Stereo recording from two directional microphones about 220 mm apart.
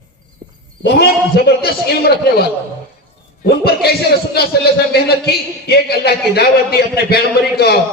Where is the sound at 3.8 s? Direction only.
45° left (ahead or behind).